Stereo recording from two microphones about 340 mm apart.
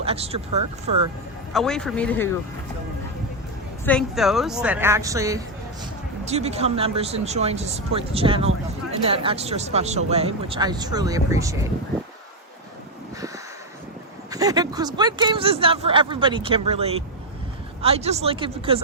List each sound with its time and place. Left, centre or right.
0.0 s speech: centre
1.5 s a woman's voice: centre
3.8 s a woman's voice: centre
14.3 s speech: centre